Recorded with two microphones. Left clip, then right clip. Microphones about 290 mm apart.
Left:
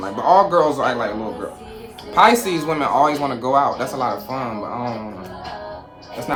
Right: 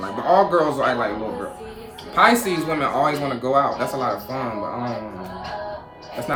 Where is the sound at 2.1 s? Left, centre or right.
Centre.